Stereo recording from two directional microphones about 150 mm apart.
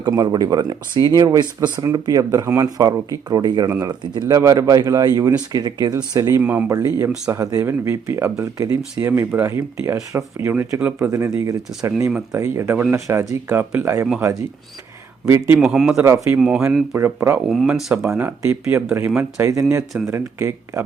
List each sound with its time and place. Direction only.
0.0 s speech: 25° right (ahead or behind)
6.4 s speech: 10° right (ahead or behind)
6.7 s speech: 20° right (ahead or behind)
15.6 s speech: 5° right (ahead or behind)
16.0 s speech: 20° right (ahead or behind)
16.4 s speech: 5° right (ahead or behind)
16.9 s speech: 15° right (ahead or behind)
17.4 s speech: centre (ahead or behind)